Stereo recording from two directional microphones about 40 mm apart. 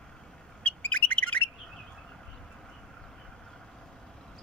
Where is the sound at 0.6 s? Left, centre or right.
Left.